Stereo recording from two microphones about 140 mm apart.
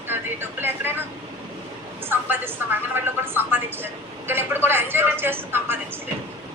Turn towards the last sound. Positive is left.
turn(degrees=-15)  # may be behind; listen again after turning